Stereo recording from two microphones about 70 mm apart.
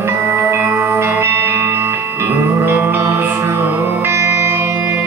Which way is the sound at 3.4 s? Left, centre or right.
Right.